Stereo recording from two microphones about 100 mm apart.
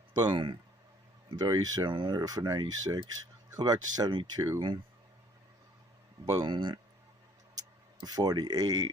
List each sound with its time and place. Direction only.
0.1 s speech: 50° right (ahead or behind)
1.4 s speech: 40° right (ahead or behind)
4.4 s speech: 30° right (ahead or behind)
6.3 s speech: 45° right (ahead or behind)
8.0 s speech: 40° right (ahead or behind)